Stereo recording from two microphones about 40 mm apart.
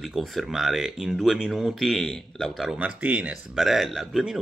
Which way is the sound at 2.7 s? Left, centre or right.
Right.